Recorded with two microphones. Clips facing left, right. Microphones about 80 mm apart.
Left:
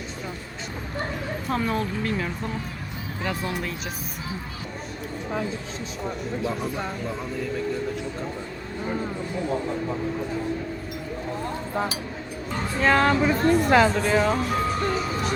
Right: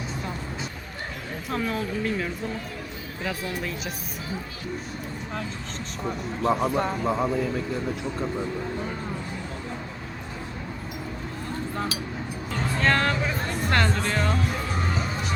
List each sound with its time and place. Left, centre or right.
1.5 s speech: centre
6.4 s speech: right
12.8 s speech: centre